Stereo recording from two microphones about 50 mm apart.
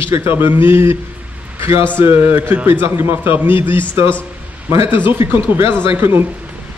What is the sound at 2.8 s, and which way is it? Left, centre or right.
A man's voice, right.